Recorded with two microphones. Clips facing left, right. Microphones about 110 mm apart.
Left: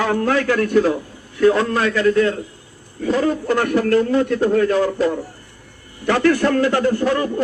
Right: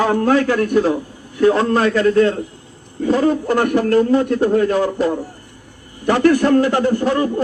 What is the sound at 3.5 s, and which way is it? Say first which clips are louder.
Speech: right 2 dB; 15° right (ahead or behind).